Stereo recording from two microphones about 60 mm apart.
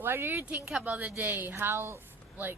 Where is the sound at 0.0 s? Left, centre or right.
Right.